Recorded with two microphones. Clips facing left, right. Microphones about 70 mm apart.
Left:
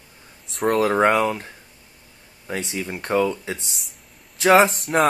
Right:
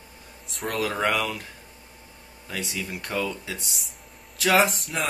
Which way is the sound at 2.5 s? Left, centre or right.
Left.